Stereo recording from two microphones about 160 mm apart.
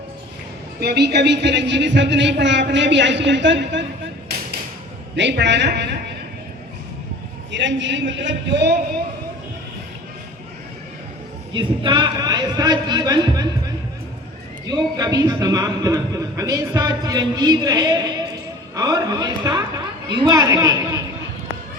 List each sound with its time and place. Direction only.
0.8 s speech: 90° right
5.1 s speech: 90° right
8.1 s speech: 90° right
11.5 s a man's voice: 30° right (ahead or behind)
14.7 s a man's voice: 25° right (ahead or behind)